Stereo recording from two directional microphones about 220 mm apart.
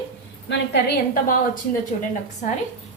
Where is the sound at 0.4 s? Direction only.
50° left (ahead or behind).